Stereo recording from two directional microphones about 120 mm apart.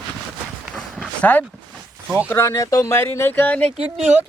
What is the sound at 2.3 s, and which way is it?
Speech, 25° left (ahead or behind).